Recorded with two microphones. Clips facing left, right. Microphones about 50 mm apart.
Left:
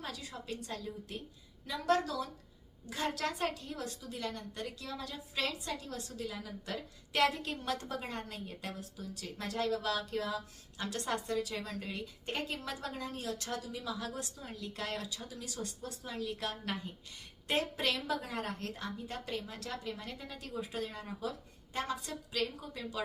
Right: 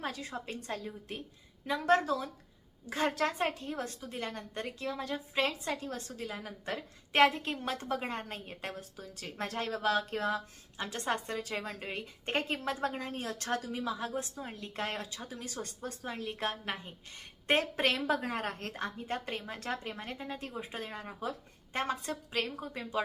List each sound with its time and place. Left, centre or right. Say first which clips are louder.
0.0 s a woman's voice: right 5 dB; right
10.8 s a woman's voice: right 2 dB; right